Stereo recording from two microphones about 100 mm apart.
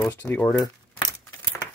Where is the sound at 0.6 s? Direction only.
45° left (ahead or behind).